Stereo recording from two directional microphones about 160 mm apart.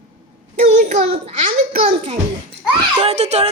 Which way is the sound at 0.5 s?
55° right (ahead or behind).